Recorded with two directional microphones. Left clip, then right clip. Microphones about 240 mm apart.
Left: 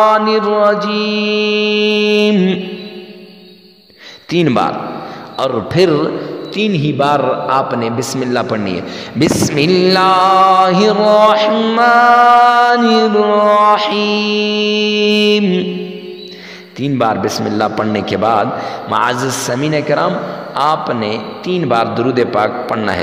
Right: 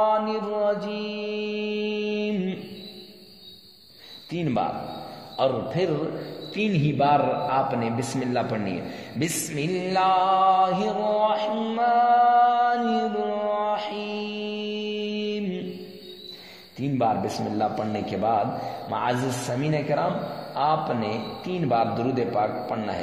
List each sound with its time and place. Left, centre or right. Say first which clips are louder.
0.0 s mantra: left 12 dB; left
4.3 s a man's voice: left 13 dB; left
16.8 s a man's voice: left 10 dB; left